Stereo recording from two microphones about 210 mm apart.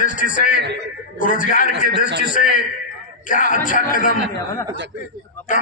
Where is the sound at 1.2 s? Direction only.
40° left (ahead or behind).